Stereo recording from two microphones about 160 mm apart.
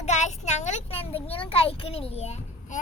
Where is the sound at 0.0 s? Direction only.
45° left (ahead or behind).